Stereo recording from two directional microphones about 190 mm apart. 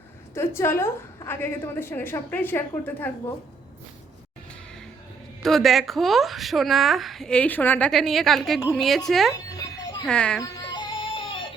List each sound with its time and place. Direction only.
0.3 s a woman's voice: 15° left (ahead or behind)
5.4 s a woman's voice: centre (ahead or behind)
9.3 s a sound: 20° left (ahead or behind)
10.1 s a woman's voice: 5° left (ahead or behind)
10.4 s music: 20° left (ahead or behind)